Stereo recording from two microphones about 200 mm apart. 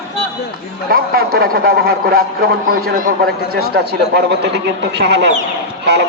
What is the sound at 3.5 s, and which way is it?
A man's voice, 55° right (ahead or behind).